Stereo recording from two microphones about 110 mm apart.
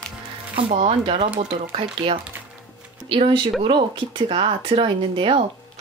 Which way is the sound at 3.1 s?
55° right (ahead or behind).